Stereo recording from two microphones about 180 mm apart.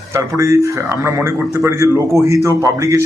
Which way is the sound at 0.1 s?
15° right (ahead or behind).